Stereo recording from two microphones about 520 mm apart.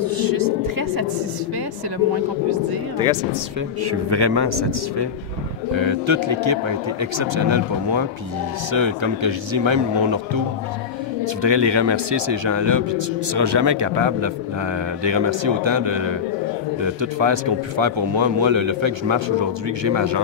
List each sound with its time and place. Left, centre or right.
0.0 s a sound: right
3.8 s a man's voice: right
5.8 s a man's voice: right
11.4 s a man's voice: right